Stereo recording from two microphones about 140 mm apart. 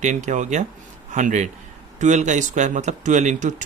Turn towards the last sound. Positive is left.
turn(degrees=-60)  # may be behind; listen again after turning